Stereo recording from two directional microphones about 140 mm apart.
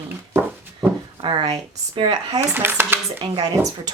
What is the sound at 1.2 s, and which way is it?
Speech, 35° right (ahead or behind).